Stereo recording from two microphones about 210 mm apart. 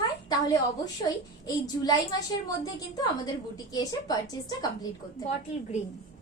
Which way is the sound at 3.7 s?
20° left (ahead or behind).